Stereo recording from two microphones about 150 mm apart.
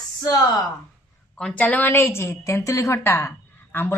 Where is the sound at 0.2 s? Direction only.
25° left (ahead or behind).